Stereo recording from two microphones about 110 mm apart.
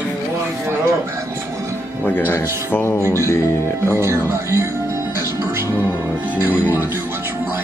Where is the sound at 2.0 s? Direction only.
15° left (ahead or behind).